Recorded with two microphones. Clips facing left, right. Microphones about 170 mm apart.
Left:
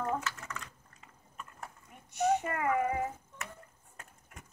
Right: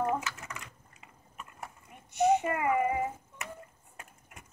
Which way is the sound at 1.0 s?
10° right (ahead or behind).